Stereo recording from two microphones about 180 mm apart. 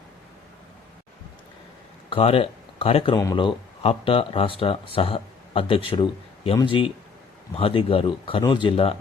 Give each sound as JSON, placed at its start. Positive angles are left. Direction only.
{"t": 2.0, "sound": "speech", "side_deg": 30}